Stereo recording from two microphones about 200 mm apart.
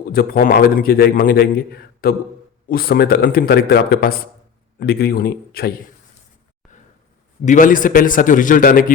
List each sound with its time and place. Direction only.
0.1 s a man's voice: 45° left (ahead or behind)
7.4 s a man's voice: 40° left (ahead or behind)